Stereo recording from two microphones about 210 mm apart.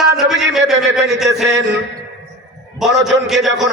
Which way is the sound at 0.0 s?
5° right (ahead or behind).